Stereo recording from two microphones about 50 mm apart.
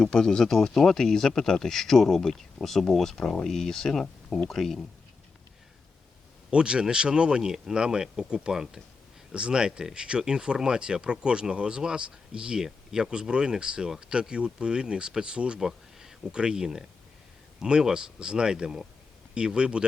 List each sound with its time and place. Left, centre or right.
0.0 s speech: centre
6.5 s speech: centre